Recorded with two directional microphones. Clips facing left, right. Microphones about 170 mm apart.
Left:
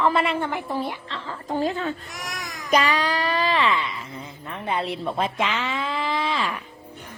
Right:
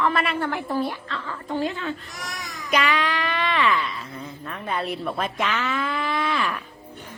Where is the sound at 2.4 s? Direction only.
40° left (ahead or behind); by 3.9 s 25° left (ahead or behind).